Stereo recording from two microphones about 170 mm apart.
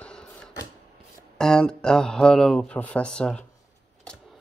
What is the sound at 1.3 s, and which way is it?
Speech, 5° left (ahead or behind).